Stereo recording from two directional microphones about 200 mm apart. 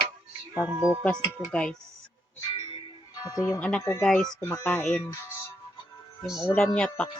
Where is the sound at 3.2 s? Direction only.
15° left (ahead or behind).